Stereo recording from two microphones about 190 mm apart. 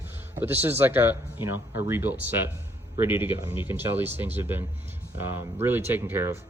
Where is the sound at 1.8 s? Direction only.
10° right (ahead or behind).